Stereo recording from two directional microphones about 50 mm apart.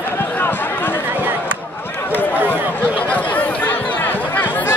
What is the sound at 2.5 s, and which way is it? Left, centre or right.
Speech, right.